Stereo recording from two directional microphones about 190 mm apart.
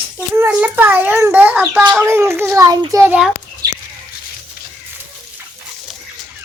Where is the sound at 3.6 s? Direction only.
20° right (ahead or behind).